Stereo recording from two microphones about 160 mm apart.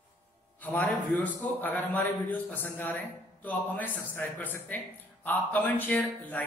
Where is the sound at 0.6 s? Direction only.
10° left (ahead or behind).